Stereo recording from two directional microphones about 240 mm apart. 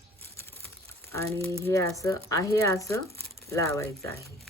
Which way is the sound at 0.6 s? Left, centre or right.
Centre.